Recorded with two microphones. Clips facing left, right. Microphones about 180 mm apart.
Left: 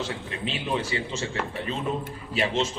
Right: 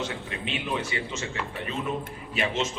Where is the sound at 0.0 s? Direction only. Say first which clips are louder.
Left 1 dB; 30° left (ahead or behind).